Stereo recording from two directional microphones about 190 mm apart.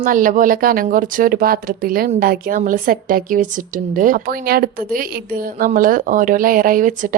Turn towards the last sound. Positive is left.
turn(degrees=-45)  # may be behind; listen again after turning